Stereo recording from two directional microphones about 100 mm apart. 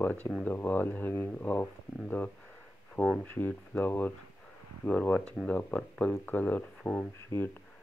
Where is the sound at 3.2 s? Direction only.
20° left (ahead or behind).